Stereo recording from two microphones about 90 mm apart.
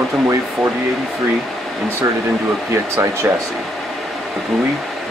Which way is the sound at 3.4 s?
Centre (ahead or behind).